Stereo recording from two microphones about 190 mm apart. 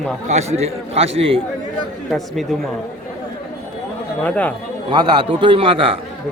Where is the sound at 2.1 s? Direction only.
Centre (ahead or behind).